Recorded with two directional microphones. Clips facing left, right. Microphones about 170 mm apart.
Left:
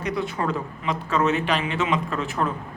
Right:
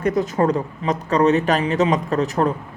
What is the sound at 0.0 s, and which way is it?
Speech, 45° right (ahead or behind).